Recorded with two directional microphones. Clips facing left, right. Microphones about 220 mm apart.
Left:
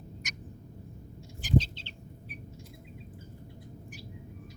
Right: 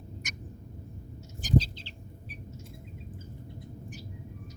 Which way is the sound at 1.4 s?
40° right (ahead or behind).